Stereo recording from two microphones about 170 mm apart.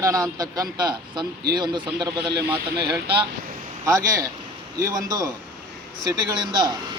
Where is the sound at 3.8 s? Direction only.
20° right (ahead or behind).